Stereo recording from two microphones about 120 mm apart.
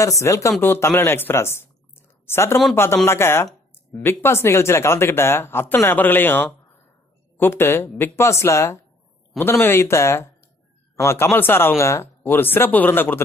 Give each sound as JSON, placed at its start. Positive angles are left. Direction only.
{"t": 0.0, "sound": "speech", "side_deg": 25}